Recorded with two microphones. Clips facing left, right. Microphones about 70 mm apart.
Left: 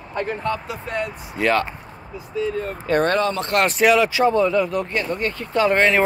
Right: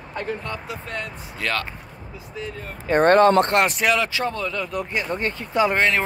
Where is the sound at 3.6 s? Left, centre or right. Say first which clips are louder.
Left 4 dB; centre.